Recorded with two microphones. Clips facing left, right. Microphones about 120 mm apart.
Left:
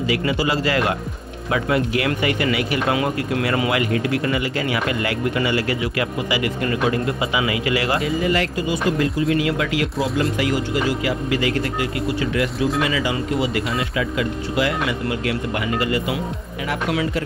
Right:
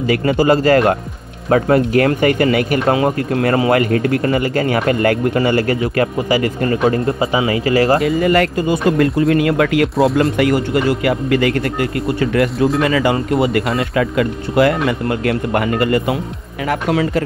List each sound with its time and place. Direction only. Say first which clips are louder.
0.0 s speech: right 6 dB; 50° right (ahead or behind)
8.2 s speech: right 6 dB; 55° right (ahead or behind)
12.5 s speech: right 5 dB; centre (ahead or behind)
12.8 s speech: right 6 dB; 50° right (ahead or behind)